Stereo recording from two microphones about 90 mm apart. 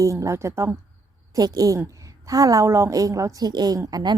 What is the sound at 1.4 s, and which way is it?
A woman's voice, 45° right (ahead or behind).